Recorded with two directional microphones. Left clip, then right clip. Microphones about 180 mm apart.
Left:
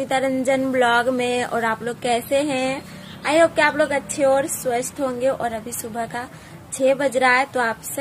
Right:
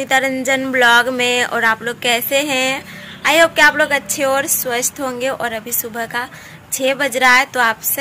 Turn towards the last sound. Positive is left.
turn(degrees=5)  # may be behind; listen again after turning